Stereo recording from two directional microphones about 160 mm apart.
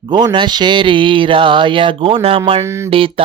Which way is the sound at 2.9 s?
35° right (ahead or behind).